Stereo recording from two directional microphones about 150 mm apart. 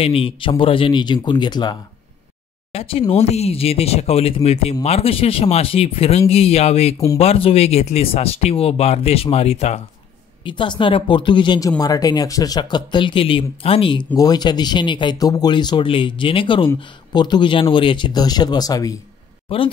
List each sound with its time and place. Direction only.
0.0 s speech: 40° left (ahead or behind)
2.7 s speech: 40° left (ahead or behind)
10.4 s speech: 35° left (ahead or behind)
19.5 s speech: 35° left (ahead or behind)